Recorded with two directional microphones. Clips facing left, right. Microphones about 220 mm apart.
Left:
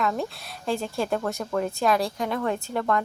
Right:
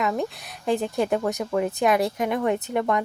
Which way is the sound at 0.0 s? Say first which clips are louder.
Right 2 dB; 15° right (ahead or behind).